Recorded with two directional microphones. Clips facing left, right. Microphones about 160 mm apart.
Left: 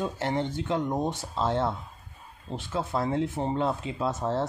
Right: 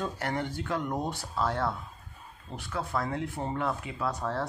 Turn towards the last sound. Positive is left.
turn(degrees=25)  # may be behind; listen again after turning